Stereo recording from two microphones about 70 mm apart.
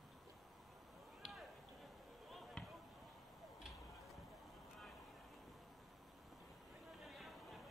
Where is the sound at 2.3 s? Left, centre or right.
Centre.